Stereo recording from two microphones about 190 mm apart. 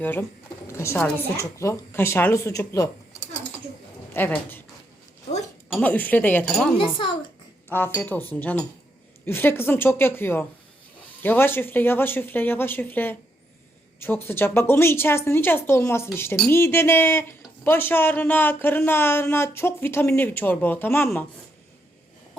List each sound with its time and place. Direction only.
0.0 s a woman's voice: 10° left (ahead or behind)
5.8 s speech: 10° left (ahead or behind)
6.7 s speech: 25° left (ahead or behind)
7.7 s speech: 15° left (ahead or behind)